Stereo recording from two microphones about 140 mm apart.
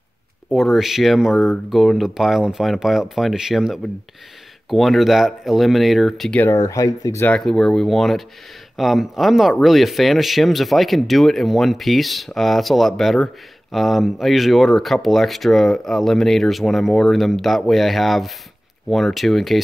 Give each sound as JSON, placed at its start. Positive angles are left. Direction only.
{"t": 0.5, "sound": "speech", "side_deg": 0}
{"t": 6.4, "sound": "speech", "side_deg": 20}
{"t": 7.2, "sound": "speech", "side_deg": 5}